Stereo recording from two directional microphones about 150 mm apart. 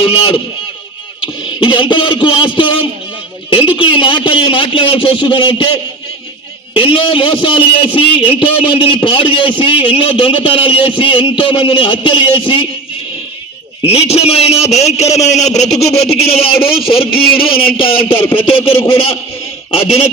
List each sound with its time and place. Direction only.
0.0 s a man's voice: 35° left (ahead or behind)
1.5 s a man's voice: 35° left (ahead or behind)
13.8 s a man's voice: 40° left (ahead or behind)